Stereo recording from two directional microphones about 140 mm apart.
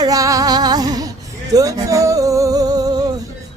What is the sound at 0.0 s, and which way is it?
Music, 25° right (ahead or behind).